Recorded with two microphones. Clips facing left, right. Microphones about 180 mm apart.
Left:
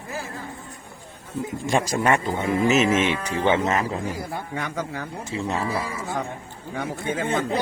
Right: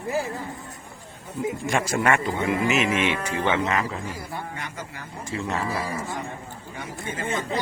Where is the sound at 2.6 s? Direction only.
40° left (ahead or behind).